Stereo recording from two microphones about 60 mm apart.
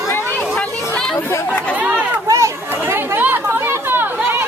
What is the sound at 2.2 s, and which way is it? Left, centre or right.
Chatter, right.